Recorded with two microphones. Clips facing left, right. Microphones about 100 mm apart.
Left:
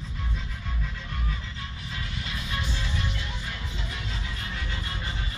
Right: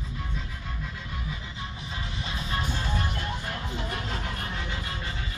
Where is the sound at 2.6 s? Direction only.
45° right (ahead or behind).